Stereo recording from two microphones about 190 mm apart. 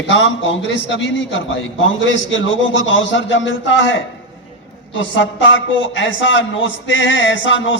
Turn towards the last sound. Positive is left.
turn(degrees=80)